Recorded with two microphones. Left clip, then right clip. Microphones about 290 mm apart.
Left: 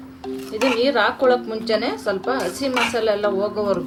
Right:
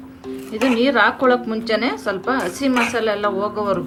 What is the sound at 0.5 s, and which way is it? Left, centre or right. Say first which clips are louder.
A woman's voice: right 1 dB; right.